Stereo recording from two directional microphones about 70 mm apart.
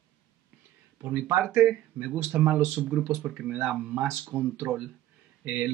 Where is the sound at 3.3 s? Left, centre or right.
Centre.